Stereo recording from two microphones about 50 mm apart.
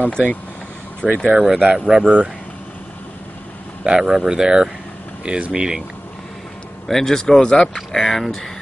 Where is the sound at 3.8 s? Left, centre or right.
Centre.